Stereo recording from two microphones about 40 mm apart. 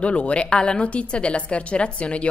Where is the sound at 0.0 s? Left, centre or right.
Left.